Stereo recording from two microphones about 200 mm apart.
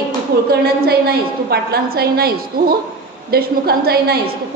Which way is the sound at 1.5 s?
50° right (ahead or behind).